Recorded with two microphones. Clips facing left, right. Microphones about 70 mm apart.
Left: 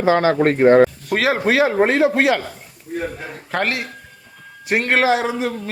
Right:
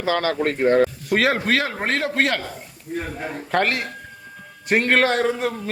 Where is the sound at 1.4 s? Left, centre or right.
Centre.